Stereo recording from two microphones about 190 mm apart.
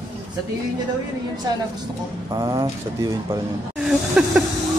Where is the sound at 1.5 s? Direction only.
20° right (ahead or behind).